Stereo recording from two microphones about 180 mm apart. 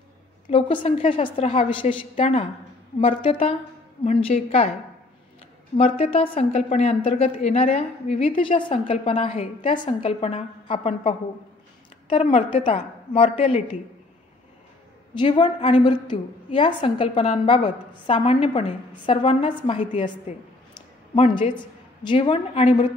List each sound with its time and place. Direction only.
0.5 s a woman's voice: 30° left (ahead or behind)
4.0 s a woman's voice: 45° left (ahead or behind)
5.8 s a woman's voice: 30° left (ahead or behind)
15.1 s a woman's voice: 25° left (ahead or behind)
21.1 s a woman's voice: 30° left (ahead or behind)